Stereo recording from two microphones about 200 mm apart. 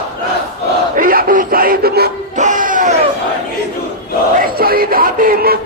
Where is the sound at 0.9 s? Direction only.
45° right (ahead or behind).